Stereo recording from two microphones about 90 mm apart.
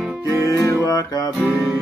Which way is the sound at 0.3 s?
35° left (ahead or behind).